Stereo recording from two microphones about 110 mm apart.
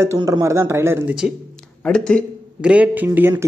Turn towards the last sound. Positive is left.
turn(degrees=-20)  # may be behind; listen again after turning